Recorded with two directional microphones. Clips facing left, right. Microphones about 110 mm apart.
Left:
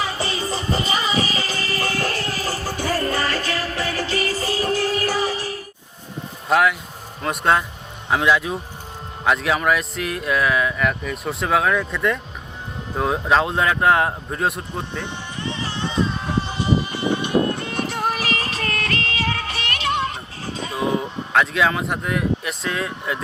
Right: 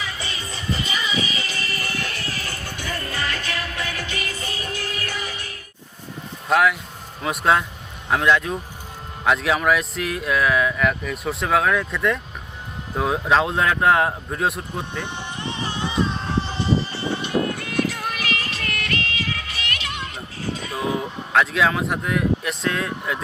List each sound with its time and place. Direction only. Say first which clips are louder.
0.0 s music: left 7 dB; 35° left (ahead or behind)
6.5 s speech: left 1 dB; centre (ahead or behind)
15.5 s music: right 2 dB; 15° right (ahead or behind)
16.2 s music: left 1 dB; 15° left (ahead or behind)
17.7 s music: right 1 dB; 30° left (ahead or behind)
20.7 s speech: left 4 dB; centre (ahead or behind)